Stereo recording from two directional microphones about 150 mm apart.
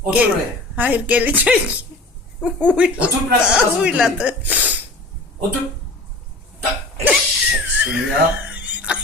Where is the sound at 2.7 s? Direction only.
10° right (ahead or behind).